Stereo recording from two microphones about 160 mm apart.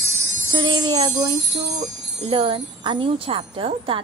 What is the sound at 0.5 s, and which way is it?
Music, 30° right (ahead or behind).